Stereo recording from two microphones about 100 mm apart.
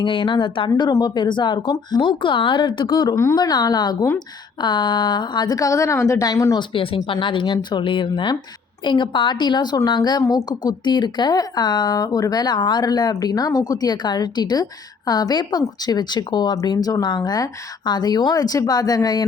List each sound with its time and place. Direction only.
0.0 s a woman's voice: 55° left (ahead or behind)
0.8 s a woman's voice: 45° left (ahead or behind)
6.6 s a woman's voice: 60° left (ahead or behind)
16.6 s speech: 35° left (ahead or behind)